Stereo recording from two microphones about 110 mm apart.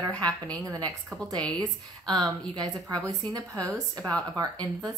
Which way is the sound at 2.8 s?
35° right (ahead or behind).